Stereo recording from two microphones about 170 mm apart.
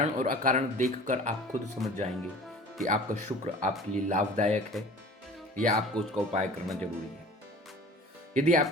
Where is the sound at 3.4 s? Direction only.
40° right (ahead or behind).